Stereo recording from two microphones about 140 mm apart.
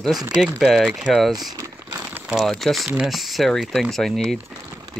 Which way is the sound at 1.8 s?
15° right (ahead or behind).